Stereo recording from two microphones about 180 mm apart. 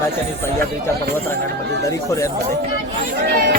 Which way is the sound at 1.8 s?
20° left (ahead or behind).